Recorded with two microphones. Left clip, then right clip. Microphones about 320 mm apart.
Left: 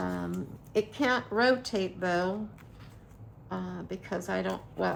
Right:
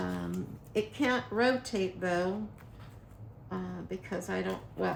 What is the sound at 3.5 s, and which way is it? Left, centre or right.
Speech, centre.